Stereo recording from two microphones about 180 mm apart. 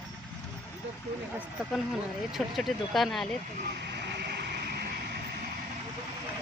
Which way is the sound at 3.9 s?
70° right (ahead or behind).